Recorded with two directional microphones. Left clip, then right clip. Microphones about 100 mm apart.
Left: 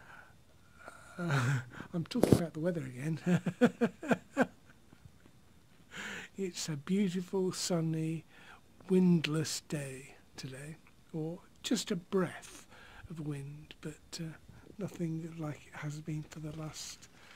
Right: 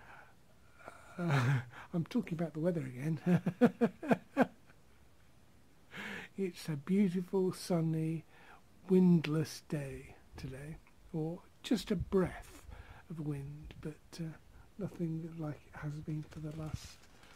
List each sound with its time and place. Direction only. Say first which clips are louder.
0.0 s wheeze: left 1 dB; 30° right (ahead or behind)
0.7 s a sound: left 1 dB; 35° right (ahead or behind)
1.1 s speech: left 1 dB; 40° right (ahead or behind)
2.9 s speech: left 1 dB; 20° right (ahead or behind)
5.9 s speech: left 2 dB; 30° right (ahead or behind)
7.8 s a sound: left 1 dB; 20° right (ahead or behind)
9.2 s speech: left 2 dB; 25° right (ahead or behind)
11.1 s speech: even; 50° right (ahead or behind)
11.6 s speech: left 1 dB; 40° right (ahead or behind); by 14.4 s 20° right (ahead or behind)
14.8 s speech: left 1 dB; 5° right (ahead or behind)